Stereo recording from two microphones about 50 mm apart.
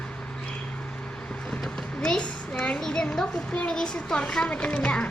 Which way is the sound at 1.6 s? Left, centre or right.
Centre.